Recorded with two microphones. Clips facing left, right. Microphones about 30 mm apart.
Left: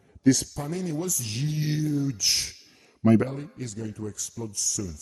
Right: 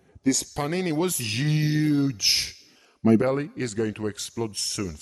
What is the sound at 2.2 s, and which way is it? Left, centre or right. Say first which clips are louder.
Speech: right 2 dB; right.